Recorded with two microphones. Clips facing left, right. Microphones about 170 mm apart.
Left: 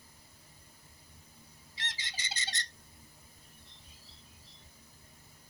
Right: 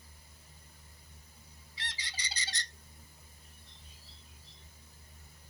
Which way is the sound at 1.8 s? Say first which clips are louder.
Left 1 dB; 20° left (ahead or behind).